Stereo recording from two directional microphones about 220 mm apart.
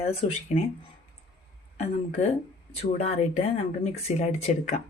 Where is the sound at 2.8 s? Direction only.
30° left (ahead or behind).